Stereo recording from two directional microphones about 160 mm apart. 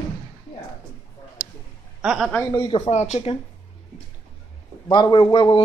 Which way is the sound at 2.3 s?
15° left (ahead or behind).